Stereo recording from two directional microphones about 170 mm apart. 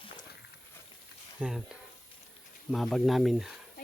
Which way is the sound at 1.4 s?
5° right (ahead or behind).